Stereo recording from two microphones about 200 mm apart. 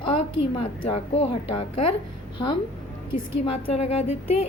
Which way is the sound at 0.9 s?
30° left (ahead or behind).